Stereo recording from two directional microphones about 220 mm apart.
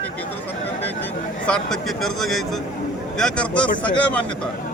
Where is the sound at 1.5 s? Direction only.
Centre (ahead or behind).